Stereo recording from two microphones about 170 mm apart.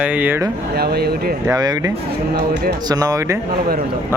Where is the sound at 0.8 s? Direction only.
65° right (ahead or behind).